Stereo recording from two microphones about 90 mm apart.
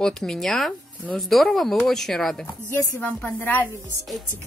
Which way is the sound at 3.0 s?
20° left (ahead or behind).